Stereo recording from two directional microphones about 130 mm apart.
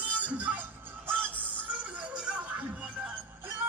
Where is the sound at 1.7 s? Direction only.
10° right (ahead or behind).